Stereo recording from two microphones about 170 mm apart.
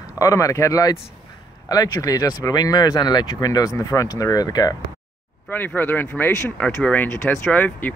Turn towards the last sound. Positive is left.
turn(degrees=10)  # may be behind; listen again after turning